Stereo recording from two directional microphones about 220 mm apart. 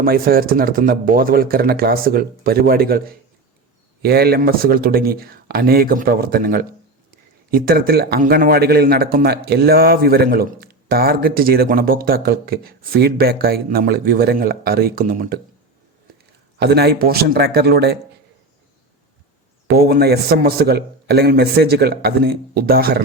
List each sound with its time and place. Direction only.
0.0 s a man's voice: 40° right (ahead or behind)
16.6 s a man's voice: 45° right (ahead or behind)
19.6 s a man's voice: 45° right (ahead or behind)